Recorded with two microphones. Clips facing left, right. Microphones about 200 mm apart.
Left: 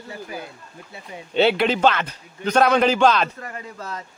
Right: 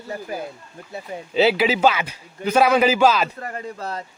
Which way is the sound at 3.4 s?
40° right (ahead or behind).